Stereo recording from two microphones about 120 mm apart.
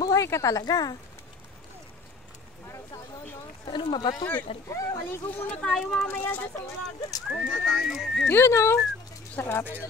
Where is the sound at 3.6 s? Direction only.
40° left (ahead or behind).